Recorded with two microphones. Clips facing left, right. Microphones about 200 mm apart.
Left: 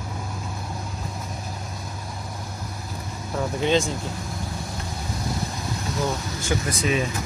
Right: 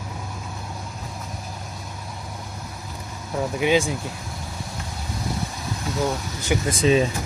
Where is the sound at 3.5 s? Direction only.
10° right (ahead or behind).